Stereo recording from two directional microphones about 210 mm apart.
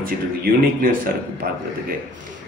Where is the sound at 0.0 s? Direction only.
45° right (ahead or behind).